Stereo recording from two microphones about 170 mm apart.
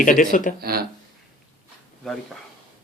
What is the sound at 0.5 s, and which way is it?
Speech, 65° right (ahead or behind).